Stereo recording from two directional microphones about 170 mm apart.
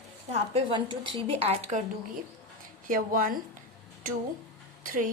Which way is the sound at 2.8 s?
55° right (ahead or behind).